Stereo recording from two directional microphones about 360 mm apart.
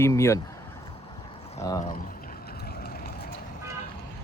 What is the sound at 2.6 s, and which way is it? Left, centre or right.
Vehicle, left.